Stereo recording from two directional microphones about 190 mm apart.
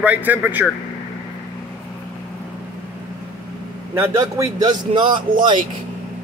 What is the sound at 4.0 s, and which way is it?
A man's voice, 20° right (ahead or behind).